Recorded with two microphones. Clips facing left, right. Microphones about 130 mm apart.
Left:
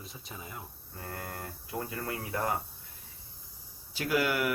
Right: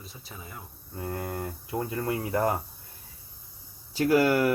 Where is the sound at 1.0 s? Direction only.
20° right (ahead or behind).